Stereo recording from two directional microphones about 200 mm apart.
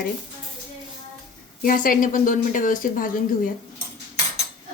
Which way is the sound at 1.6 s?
45° left (ahead or behind).